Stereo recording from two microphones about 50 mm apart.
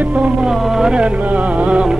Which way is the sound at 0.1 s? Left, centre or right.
Right.